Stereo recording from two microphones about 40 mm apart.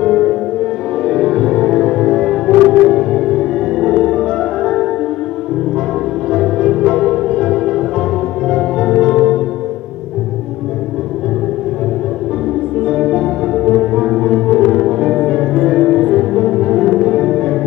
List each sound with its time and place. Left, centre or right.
0.0 s music: centre
6.3 s music: centre
12.9 s music: centre